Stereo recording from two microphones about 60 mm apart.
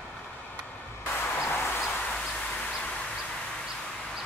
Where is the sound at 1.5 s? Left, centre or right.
Left.